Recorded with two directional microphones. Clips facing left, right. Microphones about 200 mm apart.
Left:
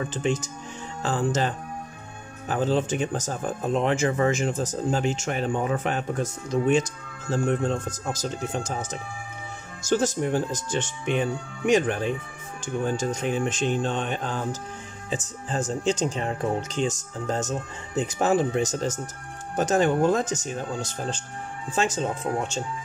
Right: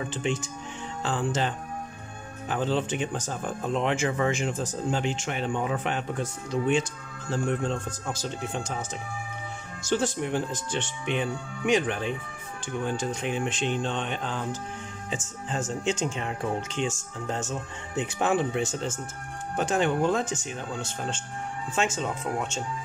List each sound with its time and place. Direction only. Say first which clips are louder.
0.1 s speech: left 3 dB; 40° left (ahead or behind)
9.8 s speech: left 3 dB; 45° left (ahead or behind)